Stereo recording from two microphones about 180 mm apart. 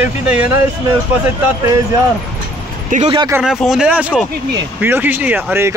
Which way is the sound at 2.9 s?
40° right (ahead or behind).